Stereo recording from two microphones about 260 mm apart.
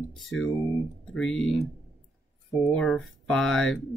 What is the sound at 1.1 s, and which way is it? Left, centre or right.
Speech, centre.